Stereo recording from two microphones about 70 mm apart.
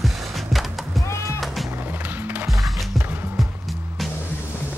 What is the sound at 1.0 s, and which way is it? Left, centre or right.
Music, left.